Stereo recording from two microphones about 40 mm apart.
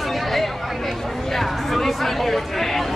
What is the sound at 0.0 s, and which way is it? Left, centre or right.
Chatter, centre.